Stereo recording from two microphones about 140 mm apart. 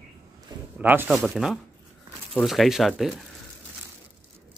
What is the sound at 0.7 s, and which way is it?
Speech, 15° right (ahead or behind).